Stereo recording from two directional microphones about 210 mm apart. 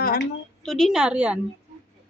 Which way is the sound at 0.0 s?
45° left (ahead or behind).